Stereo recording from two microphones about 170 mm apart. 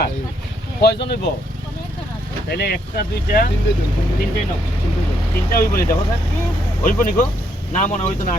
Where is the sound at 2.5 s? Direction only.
70° left (ahead or behind).